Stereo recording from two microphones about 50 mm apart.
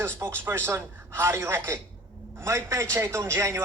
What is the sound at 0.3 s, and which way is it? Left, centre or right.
A man's voice, right.